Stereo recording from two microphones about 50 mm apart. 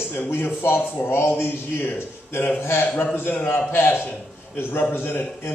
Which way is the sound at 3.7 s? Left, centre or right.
Left.